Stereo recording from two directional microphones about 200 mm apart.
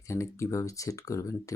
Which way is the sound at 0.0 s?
15° left (ahead or behind).